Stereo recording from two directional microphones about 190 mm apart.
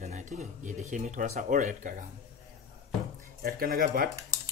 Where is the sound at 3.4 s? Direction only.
50° right (ahead or behind).